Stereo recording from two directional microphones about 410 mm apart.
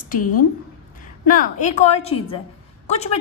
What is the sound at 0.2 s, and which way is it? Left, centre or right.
Speech, left.